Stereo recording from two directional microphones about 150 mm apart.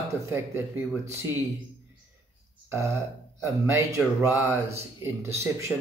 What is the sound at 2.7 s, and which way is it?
Speech, 20° right (ahead or behind).